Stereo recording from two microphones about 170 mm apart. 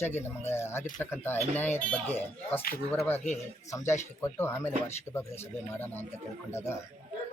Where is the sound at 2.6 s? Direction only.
60° left (ahead or behind).